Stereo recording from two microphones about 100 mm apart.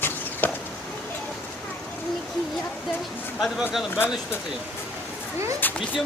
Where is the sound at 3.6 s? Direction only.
5° right (ahead or behind).